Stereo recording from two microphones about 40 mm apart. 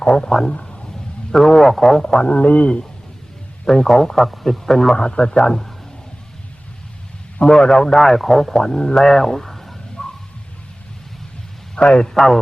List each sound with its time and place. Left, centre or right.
0.0 s a man's voice: centre
0.5 s a sound: left
1.3 s a man's voice: centre
2.2 s a man's voice: left
3.7 s a man's voice: centre
4.9 s a man's voice: left
7.5 s a man's voice: centre
10.0 s a sound: centre
11.8 s a man's voice: left
12.1 s a man's voice: centre